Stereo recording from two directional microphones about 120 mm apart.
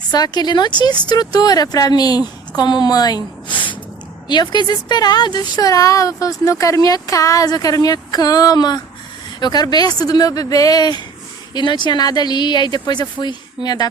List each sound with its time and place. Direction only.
0.1 s a woman's voice: 35° left (ahead or behind)